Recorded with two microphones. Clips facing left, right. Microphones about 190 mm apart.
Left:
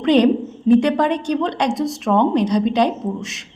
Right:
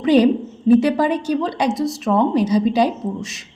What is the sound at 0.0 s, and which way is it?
A woman's voice, 5° right (ahead or behind).